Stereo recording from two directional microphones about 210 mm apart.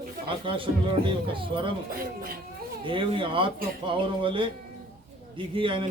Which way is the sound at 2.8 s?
25° right (ahead or behind).